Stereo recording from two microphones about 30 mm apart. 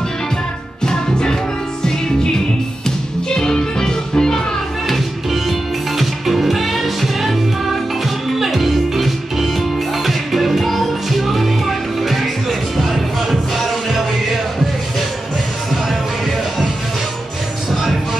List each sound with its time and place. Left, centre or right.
0.8 s music: left
3.3 s music: left
4.8 s music: centre
15.7 s music: centre